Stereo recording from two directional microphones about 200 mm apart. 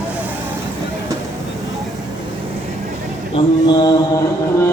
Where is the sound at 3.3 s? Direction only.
20° left (ahead or behind).